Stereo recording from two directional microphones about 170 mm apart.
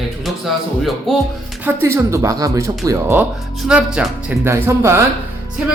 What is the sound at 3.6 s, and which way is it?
Speech, 5° right (ahead or behind).